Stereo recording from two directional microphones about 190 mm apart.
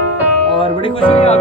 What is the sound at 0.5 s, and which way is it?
Music, 25° left (ahead or behind).